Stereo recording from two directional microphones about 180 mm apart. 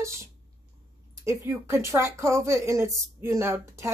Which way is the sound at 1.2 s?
15° right (ahead or behind).